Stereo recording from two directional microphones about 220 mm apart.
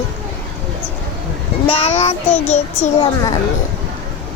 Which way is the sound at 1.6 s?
30° left (ahead or behind).